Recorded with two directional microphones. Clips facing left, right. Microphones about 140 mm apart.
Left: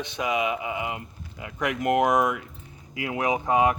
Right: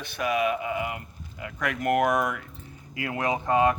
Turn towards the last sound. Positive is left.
turn(degrees=15)  # may be behind; listen again after turning